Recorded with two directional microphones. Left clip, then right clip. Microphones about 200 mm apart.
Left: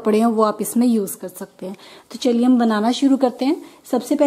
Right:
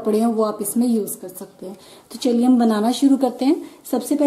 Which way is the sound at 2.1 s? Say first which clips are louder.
Left 1 dB; 5° left (ahead or behind).